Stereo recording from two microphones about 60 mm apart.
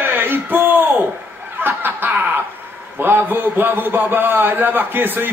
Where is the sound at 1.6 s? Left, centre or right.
Right.